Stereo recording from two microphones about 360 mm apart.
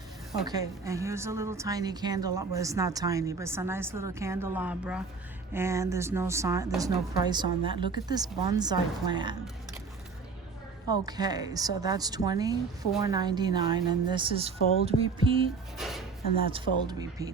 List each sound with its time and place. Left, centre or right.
0.4 s a woman's voice: centre
11.0 s a woman's voice: centre
14.6 s speech: left
14.8 s a woman's voice: centre
15.8 s a woman's voice: centre